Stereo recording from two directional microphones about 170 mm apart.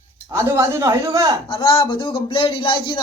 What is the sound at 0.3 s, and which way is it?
Speech, 20° right (ahead or behind).